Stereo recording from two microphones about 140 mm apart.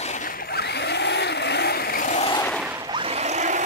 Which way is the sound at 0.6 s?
90° left.